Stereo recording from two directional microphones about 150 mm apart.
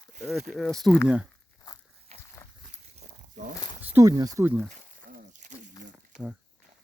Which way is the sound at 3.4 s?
65° right (ahead or behind).